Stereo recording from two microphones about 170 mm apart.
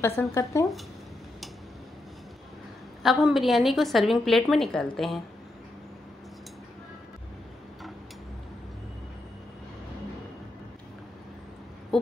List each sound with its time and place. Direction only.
0.2 s speech: 15° left (ahead or behind)
3.0 s a woman's voice: centre (ahead or behind)
11.9 s a sound: centre (ahead or behind)